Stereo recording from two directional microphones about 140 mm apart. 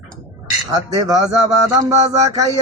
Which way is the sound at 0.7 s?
25° right (ahead or behind).